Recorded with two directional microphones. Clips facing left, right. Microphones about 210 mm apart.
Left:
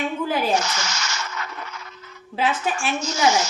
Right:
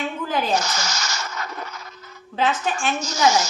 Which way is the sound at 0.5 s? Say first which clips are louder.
Even; 40° right (ahead or behind).